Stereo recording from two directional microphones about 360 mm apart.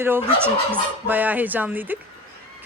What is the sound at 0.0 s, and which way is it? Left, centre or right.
Speech, centre.